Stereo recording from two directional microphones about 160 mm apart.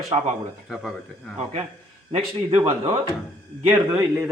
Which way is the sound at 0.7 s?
Centre (ahead or behind).